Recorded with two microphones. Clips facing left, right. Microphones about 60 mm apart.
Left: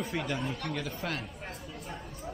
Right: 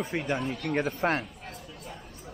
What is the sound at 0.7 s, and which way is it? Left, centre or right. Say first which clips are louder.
Speech: right 8 dB; right.